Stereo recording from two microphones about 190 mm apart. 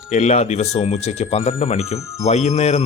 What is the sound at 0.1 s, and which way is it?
Speech, 35° left (ahead or behind).